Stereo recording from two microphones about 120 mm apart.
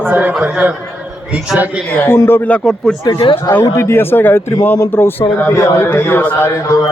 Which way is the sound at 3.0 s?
35° left (ahead or behind).